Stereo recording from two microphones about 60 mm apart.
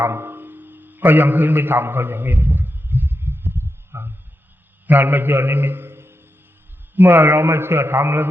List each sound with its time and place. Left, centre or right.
0.0 s music: right
4.9 s a man's voice: right